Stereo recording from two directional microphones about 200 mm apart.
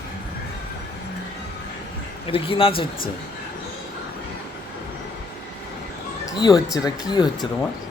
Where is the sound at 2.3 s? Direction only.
25° left (ahead or behind).